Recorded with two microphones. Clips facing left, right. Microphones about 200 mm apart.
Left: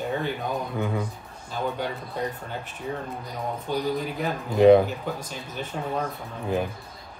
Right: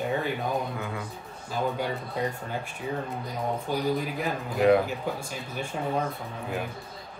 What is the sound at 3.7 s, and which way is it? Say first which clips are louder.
Speech: left 3 dB; 10° right (ahead or behind).